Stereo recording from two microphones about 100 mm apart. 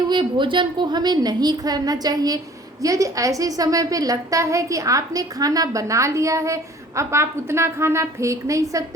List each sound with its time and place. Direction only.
0.1 s a woman's voice: 50° right (ahead or behind); by 8.8 s 35° right (ahead or behind)